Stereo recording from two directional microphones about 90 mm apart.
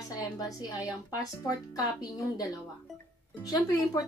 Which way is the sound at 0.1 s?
45° left (ahead or behind).